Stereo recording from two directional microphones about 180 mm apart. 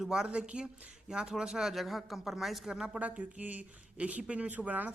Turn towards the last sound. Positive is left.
turn(degrees=-10)  # may be behind; listen again after turning